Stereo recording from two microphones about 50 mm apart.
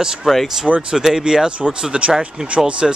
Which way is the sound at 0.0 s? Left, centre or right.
Centre.